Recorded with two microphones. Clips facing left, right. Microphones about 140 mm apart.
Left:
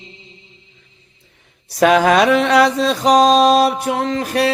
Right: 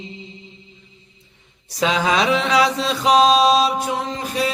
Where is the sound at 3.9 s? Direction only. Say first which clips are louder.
Left 5 dB; 70° left (ahead or behind).